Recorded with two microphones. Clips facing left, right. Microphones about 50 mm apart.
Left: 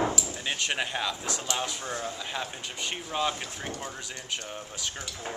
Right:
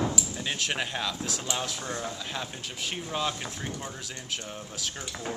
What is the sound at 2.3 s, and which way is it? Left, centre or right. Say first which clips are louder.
Speech: left 1 dB; centre.